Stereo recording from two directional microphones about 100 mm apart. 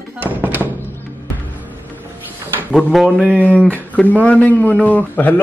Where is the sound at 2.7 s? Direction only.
Centre (ahead or behind).